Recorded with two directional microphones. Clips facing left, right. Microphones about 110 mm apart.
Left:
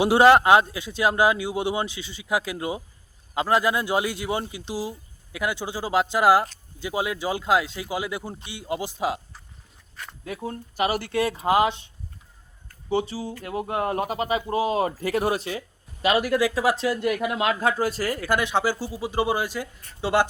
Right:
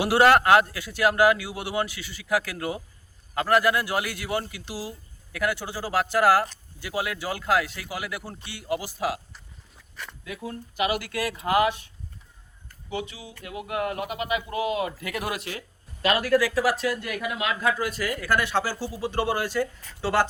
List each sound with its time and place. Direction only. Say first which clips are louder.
0.0 s a man's voice: left 3 dB; 20° left (ahead or behind)
10.2 s a man's voice: left 4 dB; 35° left (ahead or behind)
12.9 s speech: left 8 dB; 35° left (ahead or behind)
16.0 s a man's voice: left 1 dB; 15° left (ahead or behind); by 18.3 s 30° left (ahead or behind)
18.3 s speech: left 2 dB; 15° left (ahead or behind)